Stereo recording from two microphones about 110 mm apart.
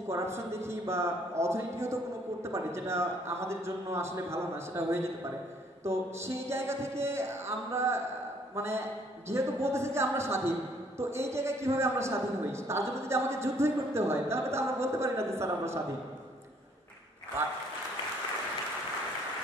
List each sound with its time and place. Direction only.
0.1 s a man's voice: 25° right (ahead or behind)